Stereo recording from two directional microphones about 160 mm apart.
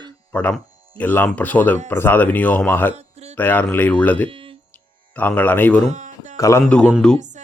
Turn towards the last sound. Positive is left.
turn(degrees=5)  # may be behind; listen again after turning